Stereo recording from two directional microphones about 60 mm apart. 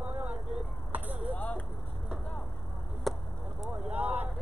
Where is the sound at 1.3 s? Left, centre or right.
Left.